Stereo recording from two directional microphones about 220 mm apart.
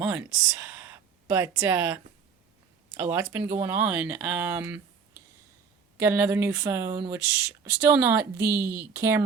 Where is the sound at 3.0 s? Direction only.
10° right (ahead or behind).